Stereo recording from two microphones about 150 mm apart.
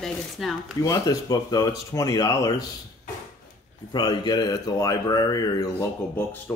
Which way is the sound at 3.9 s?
30° left (ahead or behind).